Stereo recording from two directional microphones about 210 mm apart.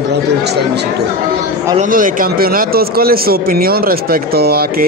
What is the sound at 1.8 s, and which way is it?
Speech, 40° right (ahead or behind).